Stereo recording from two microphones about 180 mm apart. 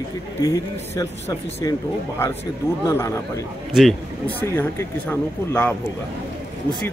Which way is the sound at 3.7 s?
Centre (ahead or behind).